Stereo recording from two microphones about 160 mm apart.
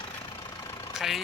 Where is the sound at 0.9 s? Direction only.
Centre (ahead or behind).